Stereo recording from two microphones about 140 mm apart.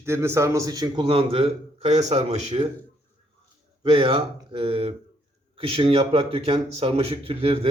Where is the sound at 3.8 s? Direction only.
40° right (ahead or behind).